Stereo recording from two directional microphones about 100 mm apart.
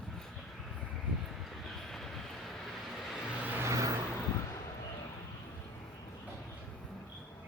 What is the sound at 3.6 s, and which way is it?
Vehicle, 30° right (ahead or behind).